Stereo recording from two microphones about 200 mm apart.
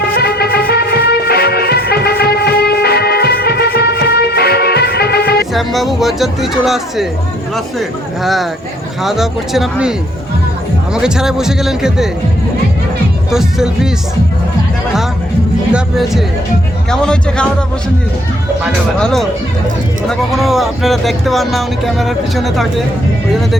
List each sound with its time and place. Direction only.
0.2 s music: 50° left (ahead or behind)
5.5 s speech: centre (ahead or behind)
10.9 s speech: 5° right (ahead or behind)
13.3 s speech: 5° right (ahead or behind)
15.7 s speech: centre (ahead or behind)
18.6 s speech: centre (ahead or behind)